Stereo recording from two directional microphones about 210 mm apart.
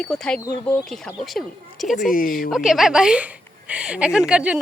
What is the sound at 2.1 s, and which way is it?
Speech, 40° left (ahead or behind).